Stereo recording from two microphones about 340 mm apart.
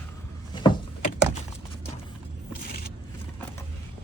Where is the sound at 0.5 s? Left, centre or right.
Centre.